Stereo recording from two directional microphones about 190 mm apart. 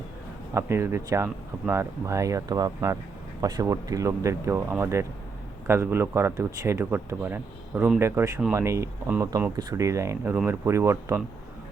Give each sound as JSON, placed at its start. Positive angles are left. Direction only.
{"t": 0.5, "sound": "speech", "side_deg": -15}